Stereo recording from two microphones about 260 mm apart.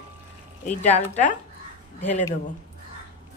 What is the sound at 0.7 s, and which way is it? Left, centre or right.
Speech, left.